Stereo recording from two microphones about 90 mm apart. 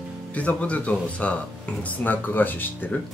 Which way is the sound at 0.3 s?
15° left (ahead or behind).